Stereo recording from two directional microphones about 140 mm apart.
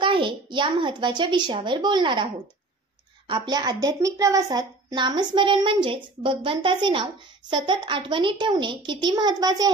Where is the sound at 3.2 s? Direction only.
35° right (ahead or behind).